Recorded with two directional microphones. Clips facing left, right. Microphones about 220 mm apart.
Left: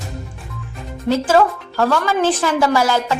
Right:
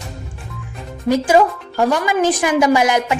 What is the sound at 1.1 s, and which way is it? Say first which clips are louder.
Speech: right 1 dB; 15° right (ahead or behind).